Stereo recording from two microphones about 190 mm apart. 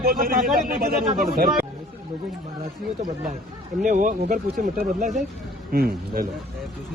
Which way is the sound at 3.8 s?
40° right (ahead or behind).